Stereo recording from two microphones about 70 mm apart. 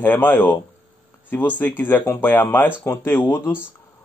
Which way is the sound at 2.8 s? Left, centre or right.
Left.